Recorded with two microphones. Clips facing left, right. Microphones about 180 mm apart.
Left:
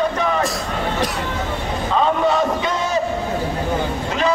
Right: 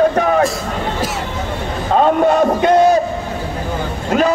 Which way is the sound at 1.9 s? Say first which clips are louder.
Right 5 dB; 50° right (ahead or behind).